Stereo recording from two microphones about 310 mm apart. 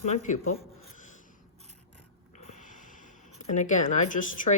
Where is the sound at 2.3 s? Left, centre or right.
Left.